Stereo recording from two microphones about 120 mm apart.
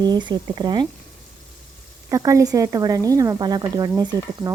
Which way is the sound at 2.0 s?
30° right (ahead or behind).